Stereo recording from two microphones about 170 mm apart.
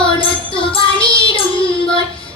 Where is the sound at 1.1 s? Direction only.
30° left (ahead or behind).